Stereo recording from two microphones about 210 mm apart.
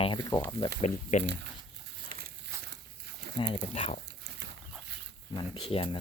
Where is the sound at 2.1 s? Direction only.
45° right (ahead or behind).